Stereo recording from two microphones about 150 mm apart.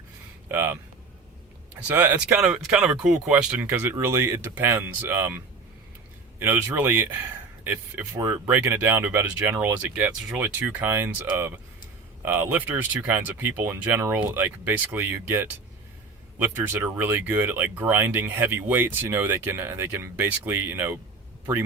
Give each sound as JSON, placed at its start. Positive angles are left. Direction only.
{"t": 0.4, "sound": "speech", "side_deg": -15}
{"t": 1.9, "sound": "speech", "side_deg": -10}
{"t": 6.4, "sound": "speech", "side_deg": -15}